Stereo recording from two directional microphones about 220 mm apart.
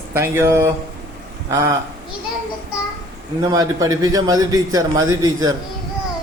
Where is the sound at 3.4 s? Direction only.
20° right (ahead or behind).